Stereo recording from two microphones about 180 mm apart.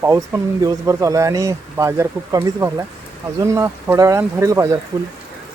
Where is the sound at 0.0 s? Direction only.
15° right (ahead or behind).